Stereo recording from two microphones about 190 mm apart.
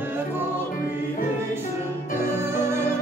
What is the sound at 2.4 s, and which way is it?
Music, 15° right (ahead or behind).